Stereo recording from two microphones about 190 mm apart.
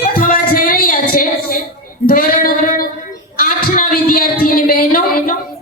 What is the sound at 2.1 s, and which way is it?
Child singing, 50° left (ahead or behind).